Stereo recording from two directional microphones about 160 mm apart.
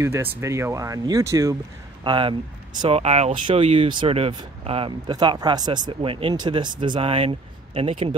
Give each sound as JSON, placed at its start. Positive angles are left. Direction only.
{"t": 0.0, "sound": "speech", "side_deg": -15}
{"t": 2.0, "sound": "speech", "side_deg": -30}